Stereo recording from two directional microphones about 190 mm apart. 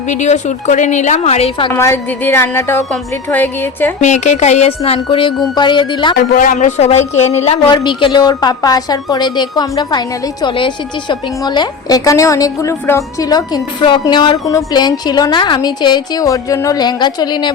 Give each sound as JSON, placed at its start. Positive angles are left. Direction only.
{"t": 0.1, "sound": "a woman's voice", "side_deg": 40}
{"t": 1.7, "sound": "a woman's voice", "side_deg": 10}
{"t": 4.0, "sound": "a woman's voice", "side_deg": 40}
{"t": 6.3, "sound": "a woman's voice", "side_deg": 45}